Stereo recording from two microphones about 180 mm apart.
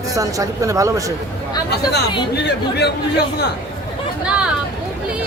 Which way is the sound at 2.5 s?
70° left (ahead or behind).